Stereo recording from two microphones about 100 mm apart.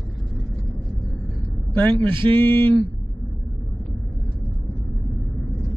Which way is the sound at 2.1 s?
55° right (ahead or behind).